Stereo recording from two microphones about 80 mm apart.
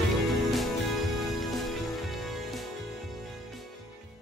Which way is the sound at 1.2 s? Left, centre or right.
Centre.